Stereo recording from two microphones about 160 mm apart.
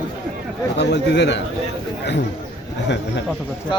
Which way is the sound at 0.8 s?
90° left.